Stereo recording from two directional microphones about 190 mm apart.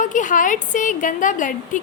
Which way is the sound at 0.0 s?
40° left (ahead or behind).